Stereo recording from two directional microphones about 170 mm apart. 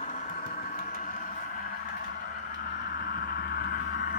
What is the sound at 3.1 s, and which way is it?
Vehicle, 65° left (ahead or behind).